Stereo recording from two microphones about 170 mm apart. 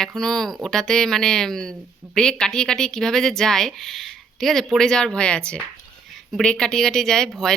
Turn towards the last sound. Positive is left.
turn(degrees=5)  # may be behind; listen again after turning